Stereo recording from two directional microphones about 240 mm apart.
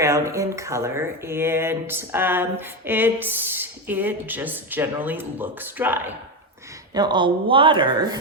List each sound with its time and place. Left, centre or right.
0.0 s speech: centre